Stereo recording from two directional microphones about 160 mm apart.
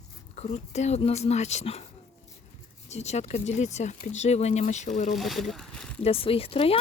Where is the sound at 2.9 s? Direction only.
45° left (ahead or behind).